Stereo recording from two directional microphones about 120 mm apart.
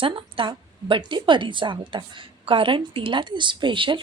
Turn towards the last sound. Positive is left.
turn(degrees=-45)  # may be behind; listen again after turning